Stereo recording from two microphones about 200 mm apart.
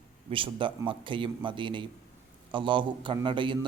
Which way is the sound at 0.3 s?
25° right (ahead or behind).